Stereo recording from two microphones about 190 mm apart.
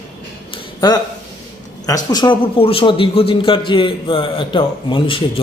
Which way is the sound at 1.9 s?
20° left (ahead or behind).